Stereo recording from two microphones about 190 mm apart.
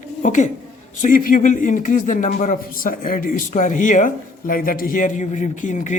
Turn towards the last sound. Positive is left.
turn(degrees=40)  # may be behind; listen again after turning